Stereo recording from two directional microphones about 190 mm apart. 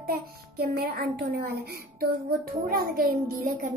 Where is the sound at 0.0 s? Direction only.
55° right (ahead or behind).